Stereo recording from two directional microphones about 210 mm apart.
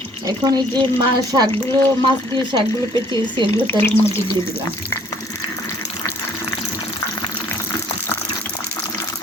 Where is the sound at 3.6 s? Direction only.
10° left (ahead or behind).